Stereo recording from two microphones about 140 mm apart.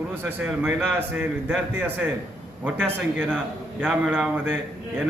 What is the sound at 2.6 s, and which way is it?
A man's voice, 15° right (ahead or behind).